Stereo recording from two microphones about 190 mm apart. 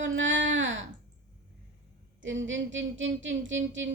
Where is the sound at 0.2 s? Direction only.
80° right.